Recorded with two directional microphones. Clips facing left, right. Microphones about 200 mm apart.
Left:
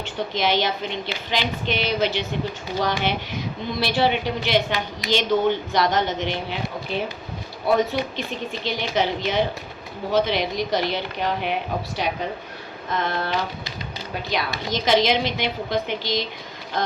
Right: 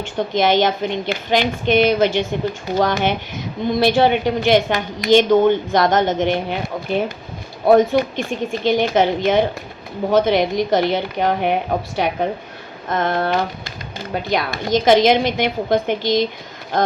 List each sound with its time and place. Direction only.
0.0 s a woman's voice: 50° right (ahead or behind)